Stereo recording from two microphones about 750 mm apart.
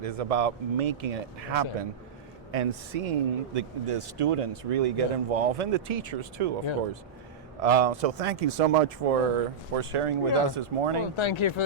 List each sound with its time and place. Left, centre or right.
0.0 s speech: right
7.6 s speech: right
9.7 s speech: right
11.2 s speech: left